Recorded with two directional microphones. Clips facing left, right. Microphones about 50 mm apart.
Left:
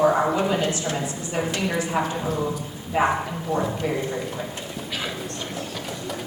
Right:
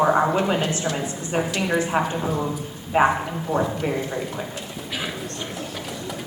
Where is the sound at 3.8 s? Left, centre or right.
Right.